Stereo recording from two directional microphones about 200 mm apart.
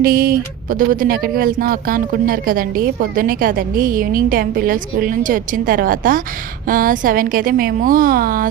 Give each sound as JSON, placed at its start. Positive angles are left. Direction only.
{"t": 0.0, "sound": "speech", "side_deg": -45}